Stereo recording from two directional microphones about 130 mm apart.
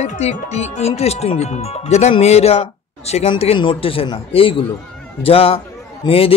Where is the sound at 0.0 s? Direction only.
60° left (ahead or behind).